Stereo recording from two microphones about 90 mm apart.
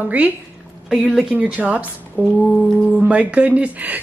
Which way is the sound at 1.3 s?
15° right (ahead or behind).